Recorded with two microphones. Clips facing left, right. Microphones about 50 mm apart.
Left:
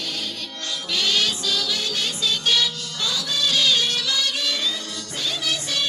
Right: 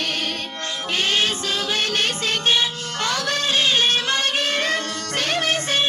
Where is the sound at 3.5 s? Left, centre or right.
Right.